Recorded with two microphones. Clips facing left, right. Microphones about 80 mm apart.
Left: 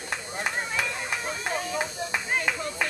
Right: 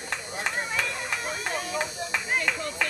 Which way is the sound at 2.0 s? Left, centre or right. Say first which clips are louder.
Even; left.